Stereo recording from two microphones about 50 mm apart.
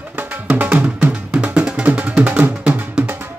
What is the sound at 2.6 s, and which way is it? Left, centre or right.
Music, right.